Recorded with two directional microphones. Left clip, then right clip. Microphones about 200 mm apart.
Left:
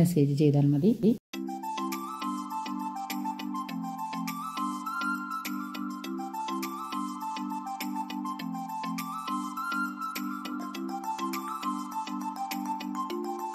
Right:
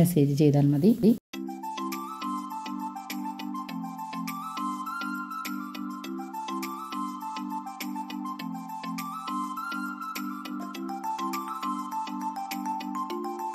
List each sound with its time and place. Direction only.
0.0 s speech: 15° right (ahead or behind)
4.6 s music: centre (ahead or behind)
11.1 s music: centre (ahead or behind)